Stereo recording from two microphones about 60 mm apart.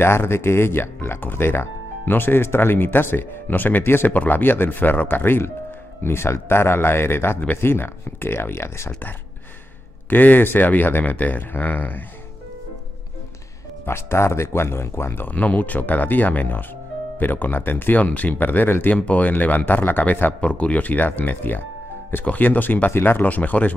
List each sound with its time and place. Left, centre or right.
0.0 s speech: left
10.0 s speech: left
13.8 s speech: left
15.2 s speech: left